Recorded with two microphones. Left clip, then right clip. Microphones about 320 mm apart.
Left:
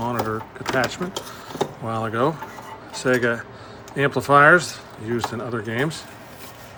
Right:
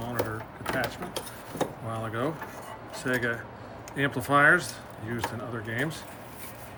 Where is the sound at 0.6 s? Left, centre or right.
Centre.